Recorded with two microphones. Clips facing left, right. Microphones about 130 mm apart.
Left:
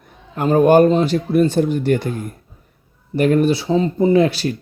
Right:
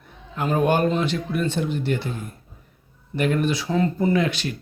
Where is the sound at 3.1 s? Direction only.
40° left (ahead or behind); by 4.2 s 20° left (ahead or behind).